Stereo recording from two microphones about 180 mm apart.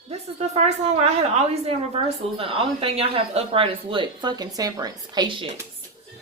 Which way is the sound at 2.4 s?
30° right (ahead or behind).